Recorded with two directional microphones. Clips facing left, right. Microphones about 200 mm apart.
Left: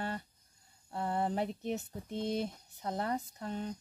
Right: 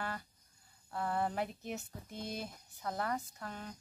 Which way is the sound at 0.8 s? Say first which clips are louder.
Left 2 dB; 25° left (ahead or behind).